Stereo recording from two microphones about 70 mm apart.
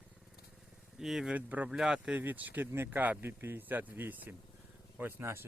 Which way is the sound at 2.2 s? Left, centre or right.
Right.